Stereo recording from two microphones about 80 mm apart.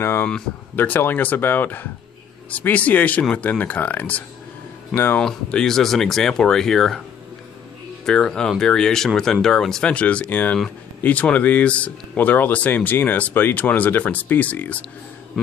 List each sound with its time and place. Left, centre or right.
0.0 s speech: left
5.2 s speech: centre
8.0 s speech: centre